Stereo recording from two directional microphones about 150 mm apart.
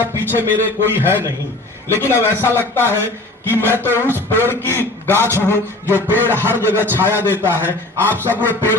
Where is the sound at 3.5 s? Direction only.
15° right (ahead or behind).